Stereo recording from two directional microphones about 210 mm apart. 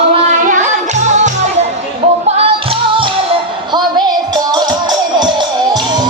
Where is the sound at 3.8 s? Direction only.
20° right (ahead or behind).